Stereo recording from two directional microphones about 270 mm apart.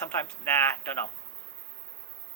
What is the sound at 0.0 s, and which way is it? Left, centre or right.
Speech, centre.